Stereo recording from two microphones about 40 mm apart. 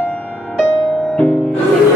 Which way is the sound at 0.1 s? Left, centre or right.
Left.